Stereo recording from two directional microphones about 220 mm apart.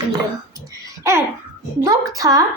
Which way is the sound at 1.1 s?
10° right (ahead or behind).